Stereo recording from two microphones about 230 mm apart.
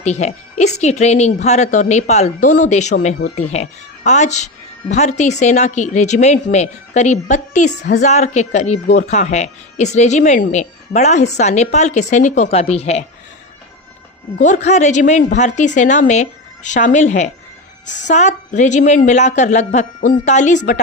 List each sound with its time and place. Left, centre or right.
0.0 s speech: left
14.3 s speech: left